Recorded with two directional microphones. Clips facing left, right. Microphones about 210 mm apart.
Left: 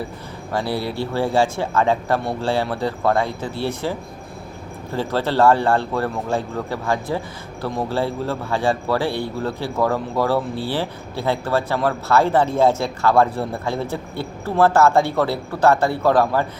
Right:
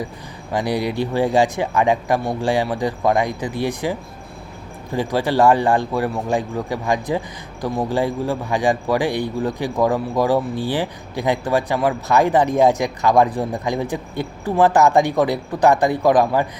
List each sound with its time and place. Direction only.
0.5 s a man's voice: 15° right (ahead or behind)